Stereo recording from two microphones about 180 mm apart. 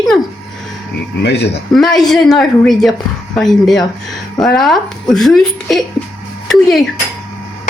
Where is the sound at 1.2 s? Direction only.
70° left (ahead or behind).